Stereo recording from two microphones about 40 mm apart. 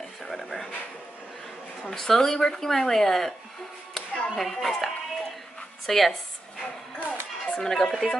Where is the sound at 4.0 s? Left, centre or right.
Centre.